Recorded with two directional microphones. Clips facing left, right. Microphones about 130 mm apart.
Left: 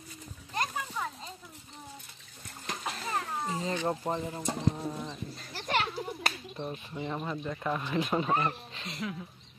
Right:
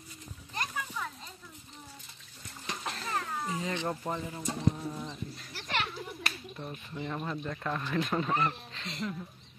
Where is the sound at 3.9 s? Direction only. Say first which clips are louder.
Left 3 dB; 25° left (ahead or behind).